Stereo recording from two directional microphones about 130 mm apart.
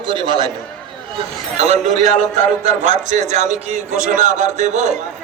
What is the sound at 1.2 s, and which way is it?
A man's voice, 55° right (ahead or behind).